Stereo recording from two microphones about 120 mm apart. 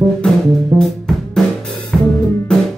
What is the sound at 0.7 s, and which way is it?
Music, centre (ahead or behind).